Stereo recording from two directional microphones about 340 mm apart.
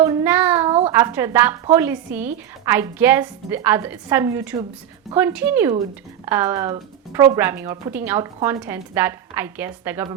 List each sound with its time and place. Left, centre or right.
0.0 s a woman's voice: centre